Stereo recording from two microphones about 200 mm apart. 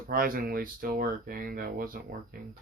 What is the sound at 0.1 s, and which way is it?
Speech, 45° right (ahead or behind).